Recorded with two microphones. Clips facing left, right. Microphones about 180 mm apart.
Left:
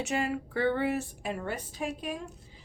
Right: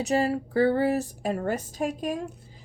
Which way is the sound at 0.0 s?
35° right (ahead or behind).